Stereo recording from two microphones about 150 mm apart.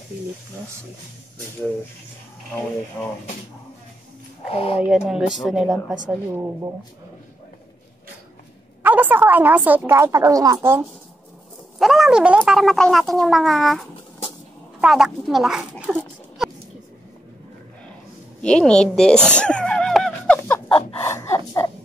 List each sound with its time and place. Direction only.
3.0 s speech: 10° left (ahead or behind)
4.5 s speech: 40° left (ahead or behind)
4.8 s speech: 5° right (ahead or behind)
8.8 s a woman's voice: 10° right (ahead or behind)
11.8 s speech: centre (ahead or behind)
18.4 s neigh: 5° left (ahead or behind)
21.0 s a sound: 20° left (ahead or behind)